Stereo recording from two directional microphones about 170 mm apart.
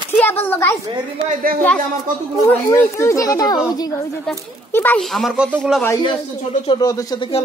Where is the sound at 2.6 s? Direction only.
15° left (ahead or behind).